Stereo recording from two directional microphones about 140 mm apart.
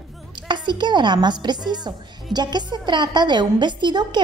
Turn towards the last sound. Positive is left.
turn(degrees=-30)  # may be behind; listen again after turning